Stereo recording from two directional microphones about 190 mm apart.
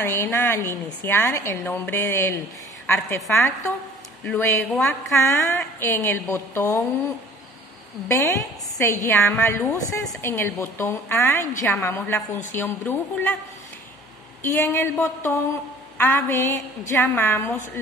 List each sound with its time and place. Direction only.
0.0 s a woman's voice: 15° left (ahead or behind)
8.1 s a woman's voice: 15° left (ahead or behind)
14.4 s a woman's voice: 10° left (ahead or behind)